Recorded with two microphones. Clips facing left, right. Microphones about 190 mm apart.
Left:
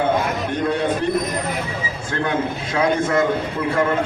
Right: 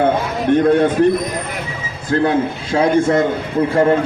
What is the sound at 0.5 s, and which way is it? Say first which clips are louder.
Speech: right 11 dB; 55° right (ahead or behind).